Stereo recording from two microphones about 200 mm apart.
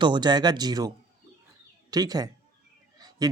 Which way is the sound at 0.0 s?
20° right (ahead or behind).